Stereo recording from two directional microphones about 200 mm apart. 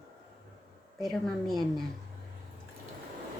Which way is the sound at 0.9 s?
Centre (ahead or behind).